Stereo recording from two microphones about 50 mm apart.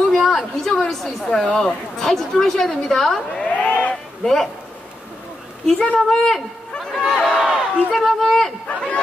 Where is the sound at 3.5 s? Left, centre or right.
Left.